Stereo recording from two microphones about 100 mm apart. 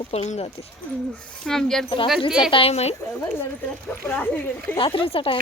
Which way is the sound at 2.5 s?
80° left.